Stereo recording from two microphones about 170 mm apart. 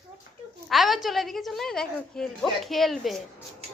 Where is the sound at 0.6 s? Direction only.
Centre (ahead or behind).